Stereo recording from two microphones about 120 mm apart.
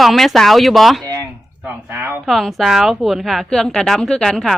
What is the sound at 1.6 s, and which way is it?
Speech, 20° right (ahead or behind).